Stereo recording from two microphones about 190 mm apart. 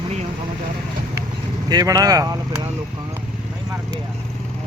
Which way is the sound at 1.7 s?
20° right (ahead or behind).